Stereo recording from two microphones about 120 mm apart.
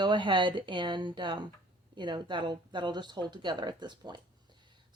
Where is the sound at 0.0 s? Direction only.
40° right (ahead or behind).